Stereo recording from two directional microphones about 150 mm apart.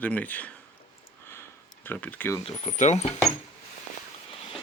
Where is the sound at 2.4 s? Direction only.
45° left (ahead or behind).